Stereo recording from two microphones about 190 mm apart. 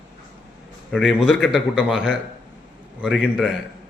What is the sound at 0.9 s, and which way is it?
A man's voice, centre (ahead or behind).